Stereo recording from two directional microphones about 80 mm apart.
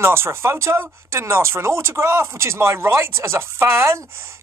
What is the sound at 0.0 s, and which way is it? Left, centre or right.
Speech, right.